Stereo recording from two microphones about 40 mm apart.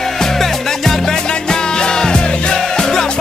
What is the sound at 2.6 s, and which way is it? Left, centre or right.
Music, centre.